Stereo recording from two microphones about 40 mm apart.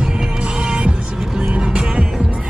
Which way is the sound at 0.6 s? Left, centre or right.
Right.